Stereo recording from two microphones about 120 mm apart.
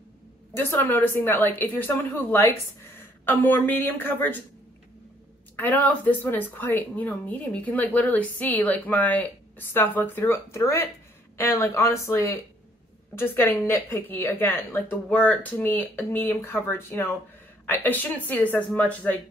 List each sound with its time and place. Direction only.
0.6 s a woman's voice: 15° left (ahead or behind)
5.6 s a woman's voice: 15° left (ahead or behind)